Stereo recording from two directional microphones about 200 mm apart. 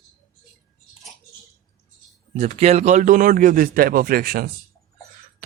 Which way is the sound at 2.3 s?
30° right (ahead or behind).